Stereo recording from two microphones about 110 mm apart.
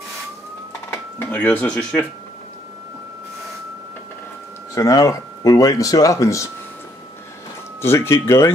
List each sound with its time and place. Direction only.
0.8 s speech: 15° left (ahead or behind)
4.7 s speech: 30° left (ahead or behind)
7.8 s speech: 20° left (ahead or behind)